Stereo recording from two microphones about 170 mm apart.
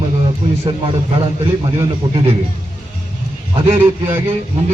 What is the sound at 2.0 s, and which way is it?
Speech, 30° right (ahead or behind).